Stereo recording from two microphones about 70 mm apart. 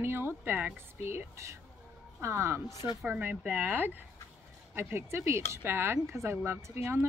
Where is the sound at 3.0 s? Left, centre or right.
Right.